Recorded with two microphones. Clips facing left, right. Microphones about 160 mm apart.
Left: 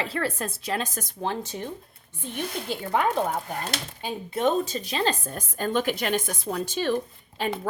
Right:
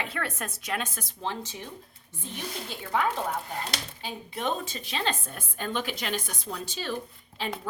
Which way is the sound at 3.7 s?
45° left (ahead or behind).